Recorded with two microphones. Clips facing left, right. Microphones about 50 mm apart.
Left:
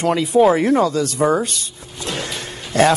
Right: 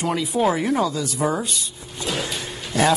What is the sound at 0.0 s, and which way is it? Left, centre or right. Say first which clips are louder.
Speech: left 5 dB; left.